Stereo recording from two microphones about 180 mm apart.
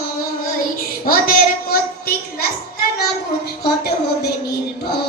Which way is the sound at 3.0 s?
60° left (ahead or behind).